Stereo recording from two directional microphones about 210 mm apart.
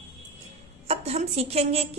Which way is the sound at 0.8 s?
30° right (ahead or behind).